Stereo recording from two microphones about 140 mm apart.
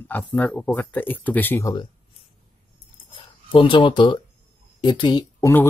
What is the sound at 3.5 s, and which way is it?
Speech, 35° left (ahead or behind).